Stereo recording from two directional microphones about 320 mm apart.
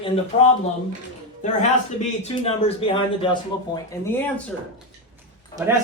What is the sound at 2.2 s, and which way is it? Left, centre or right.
Speech, centre.